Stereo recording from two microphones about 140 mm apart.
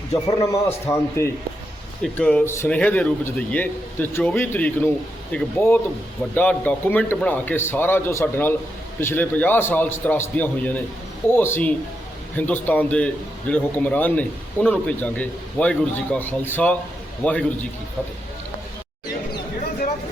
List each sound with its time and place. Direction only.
0.1 s a man's voice: 20° left (ahead or behind)
2.1 s a man's voice: 10° left (ahead or behind)